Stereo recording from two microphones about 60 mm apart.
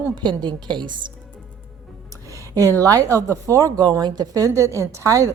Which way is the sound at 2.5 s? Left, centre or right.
Right.